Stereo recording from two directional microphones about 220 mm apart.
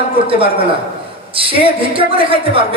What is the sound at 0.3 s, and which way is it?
Speech, 25° right (ahead or behind).